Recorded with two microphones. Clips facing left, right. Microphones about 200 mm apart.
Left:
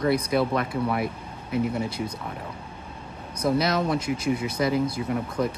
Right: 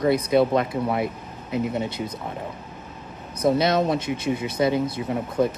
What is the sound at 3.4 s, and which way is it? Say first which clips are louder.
Speech: right 3 dB; 25° right (ahead or behind).